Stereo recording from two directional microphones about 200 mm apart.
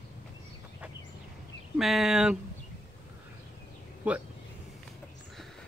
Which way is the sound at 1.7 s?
Centre (ahead or behind).